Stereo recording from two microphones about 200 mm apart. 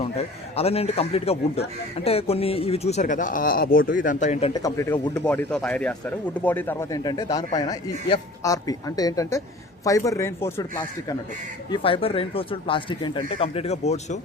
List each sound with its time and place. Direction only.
0.0 s speech: 30° left (ahead or behind)
4.5 s speech: 15° left (ahead or behind); by 14.2 s 35° left (ahead or behind)